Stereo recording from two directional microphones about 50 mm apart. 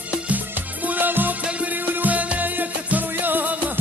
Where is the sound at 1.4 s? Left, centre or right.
Right.